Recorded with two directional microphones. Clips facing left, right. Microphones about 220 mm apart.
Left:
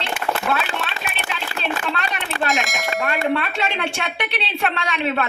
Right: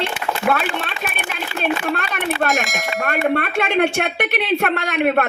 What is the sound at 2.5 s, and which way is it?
Speech, centre (ahead or behind).